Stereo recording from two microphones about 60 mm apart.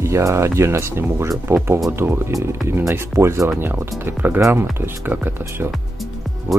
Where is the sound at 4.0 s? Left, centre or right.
Right.